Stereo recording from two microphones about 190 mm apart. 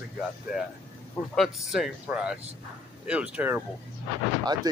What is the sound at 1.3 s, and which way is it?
Speech, centre (ahead or behind).